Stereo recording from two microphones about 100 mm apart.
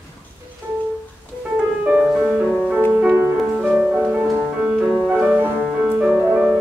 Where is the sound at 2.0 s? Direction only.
10° right (ahead or behind).